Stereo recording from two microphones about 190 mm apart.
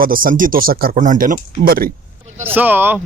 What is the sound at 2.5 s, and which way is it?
Speech, 10° right (ahead or behind).